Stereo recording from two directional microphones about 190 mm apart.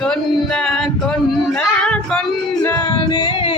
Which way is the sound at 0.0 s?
5° left (ahead or behind).